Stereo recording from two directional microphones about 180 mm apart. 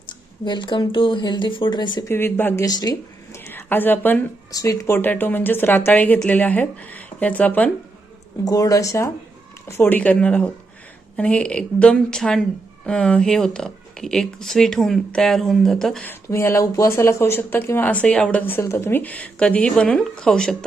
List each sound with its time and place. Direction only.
0.4 s speech: 25° left (ahead or behind); by 7.7 s 10° left (ahead or behind)
8.4 s a woman's voice: 20° left (ahead or behind)
16.3 s speech: 15° left (ahead or behind)